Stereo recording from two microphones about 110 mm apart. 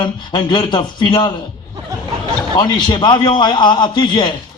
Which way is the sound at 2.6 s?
45° left (ahead or behind).